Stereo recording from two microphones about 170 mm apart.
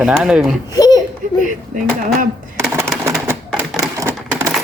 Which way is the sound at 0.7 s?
20° left (ahead or behind).